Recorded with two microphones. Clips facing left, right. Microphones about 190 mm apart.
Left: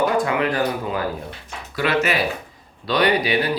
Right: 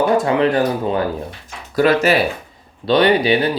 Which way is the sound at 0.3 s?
30° right (ahead or behind).